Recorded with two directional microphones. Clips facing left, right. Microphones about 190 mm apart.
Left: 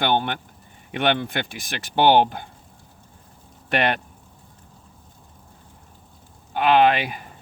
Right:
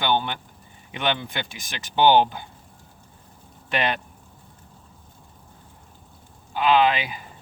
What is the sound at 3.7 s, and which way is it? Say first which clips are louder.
Speech: left 3 dB; 55° left (ahead or behind).